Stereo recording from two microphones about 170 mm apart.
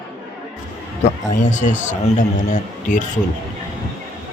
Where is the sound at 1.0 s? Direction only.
45° left (ahead or behind).